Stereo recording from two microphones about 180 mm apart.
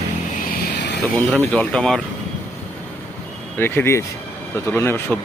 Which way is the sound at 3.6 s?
10° left (ahead or behind).